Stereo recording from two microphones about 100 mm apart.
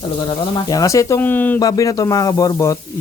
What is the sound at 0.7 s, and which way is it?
Speech, 35° left (ahead or behind).